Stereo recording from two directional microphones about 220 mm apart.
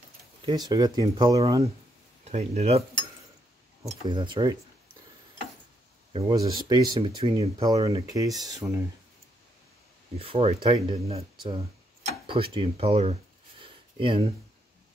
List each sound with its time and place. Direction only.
0.4 s speech: 20° right (ahead or behind)
2.2 s speech: 30° right (ahead or behind)
3.8 s speech: 20° right (ahead or behind)
6.1 s speech: 20° right (ahead or behind)
10.1 s speech: 25° right (ahead or behind)